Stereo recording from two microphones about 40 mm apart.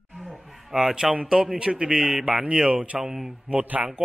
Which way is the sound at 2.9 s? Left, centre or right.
Centre.